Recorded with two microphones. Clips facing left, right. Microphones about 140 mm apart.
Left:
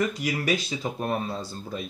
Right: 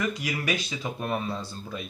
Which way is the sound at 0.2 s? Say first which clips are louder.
Left 3 dB; 35° left (ahead or behind).